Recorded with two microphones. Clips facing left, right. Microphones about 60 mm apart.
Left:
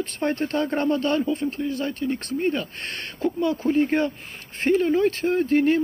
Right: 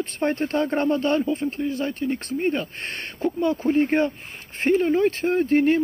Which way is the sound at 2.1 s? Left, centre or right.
Centre.